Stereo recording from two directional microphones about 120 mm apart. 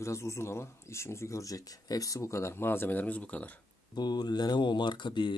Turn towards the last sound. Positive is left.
turn(degrees=40)  # may be behind; listen again after turning